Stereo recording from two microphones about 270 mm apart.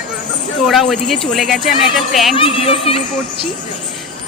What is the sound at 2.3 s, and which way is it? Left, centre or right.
Speech, centre.